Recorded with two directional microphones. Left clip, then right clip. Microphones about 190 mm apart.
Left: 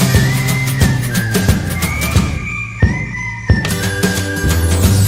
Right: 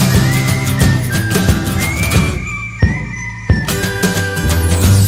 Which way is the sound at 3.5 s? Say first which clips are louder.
Right 1 dB; centre (ahead or behind).